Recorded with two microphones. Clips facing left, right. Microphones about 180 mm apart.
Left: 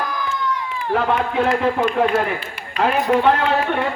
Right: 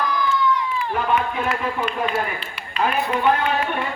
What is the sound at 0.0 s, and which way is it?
Run, 50° left (ahead or behind).